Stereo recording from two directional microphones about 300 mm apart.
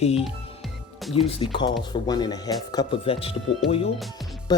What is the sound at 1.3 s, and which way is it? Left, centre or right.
Speech, centre.